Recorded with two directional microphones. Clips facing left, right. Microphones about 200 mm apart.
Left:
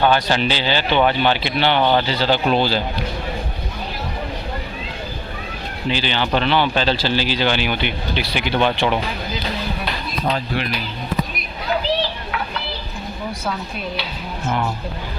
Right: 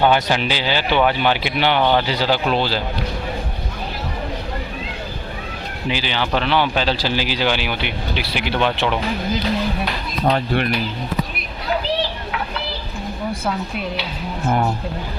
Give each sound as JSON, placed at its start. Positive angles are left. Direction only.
{"t": 0.0, "sound": "speech", "side_deg": -15}
{"t": 5.9, "sound": "speech", "side_deg": -5}
{"t": 10.3, "sound": "speech", "side_deg": -60}